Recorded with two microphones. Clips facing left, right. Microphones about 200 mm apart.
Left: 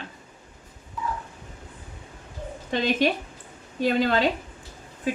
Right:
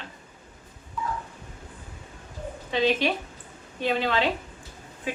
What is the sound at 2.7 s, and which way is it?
A woman's voice, 45° left (ahead or behind).